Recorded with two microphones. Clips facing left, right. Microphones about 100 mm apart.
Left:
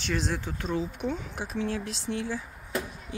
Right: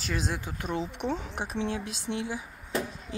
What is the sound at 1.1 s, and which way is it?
Speech, 30° right (ahead or behind).